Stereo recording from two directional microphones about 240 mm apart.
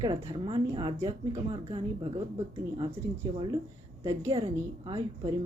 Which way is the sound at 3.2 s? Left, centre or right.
Centre.